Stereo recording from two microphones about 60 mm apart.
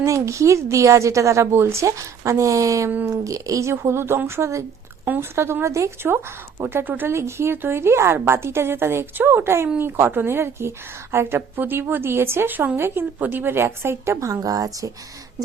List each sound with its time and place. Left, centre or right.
0.0 s a woman's voice: right
6.6 s speech: right
7.1 s speech: right
14.4 s speech: right